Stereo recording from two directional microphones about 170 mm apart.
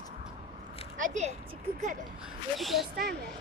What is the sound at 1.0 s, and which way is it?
Speech, 45° right (ahead or behind).